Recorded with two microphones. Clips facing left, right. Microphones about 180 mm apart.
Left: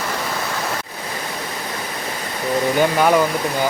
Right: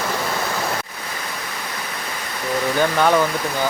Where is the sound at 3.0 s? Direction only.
10° left (ahead or behind).